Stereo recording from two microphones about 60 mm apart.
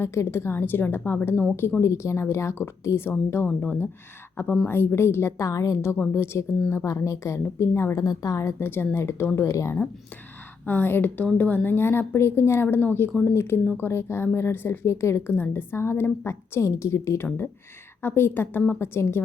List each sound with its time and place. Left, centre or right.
0.0 s a woman's voice: left
1.8 s speech: left
3.4 s a woman's voice: left
5.5 s a woman's voice: left
6.1 s speech: left
7.9 s a woman's voice: left
8.5 s speech: left
10.7 s a woman's voice: left
12.6 s a woman's voice: left
15.4 s a woman's voice: left